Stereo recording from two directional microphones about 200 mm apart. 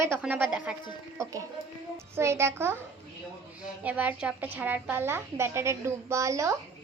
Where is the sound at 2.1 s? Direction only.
15° right (ahead or behind).